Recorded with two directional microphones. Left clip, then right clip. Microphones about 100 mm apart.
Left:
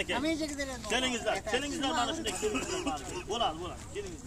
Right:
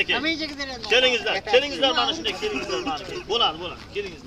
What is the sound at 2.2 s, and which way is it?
Speech, 30° right (ahead or behind).